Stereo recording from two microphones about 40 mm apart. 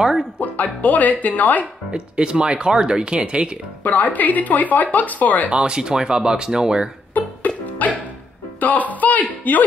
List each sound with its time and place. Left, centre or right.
0.0 s speech: centre
0.4 s speech: left
1.9 s speech: right
3.8 s speech: left
5.5 s speech: right
7.2 s music: left
8.5 s speech: left